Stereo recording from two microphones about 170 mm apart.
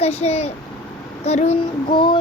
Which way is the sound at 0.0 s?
40° left (ahead or behind).